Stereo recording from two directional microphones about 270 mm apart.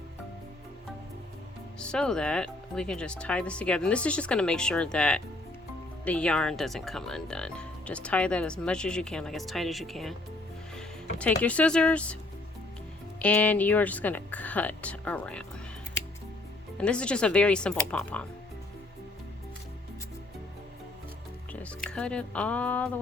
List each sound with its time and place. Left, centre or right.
1.8 s speech: centre
13.1 s speech: centre
16.7 s speech: centre
21.5 s speech: centre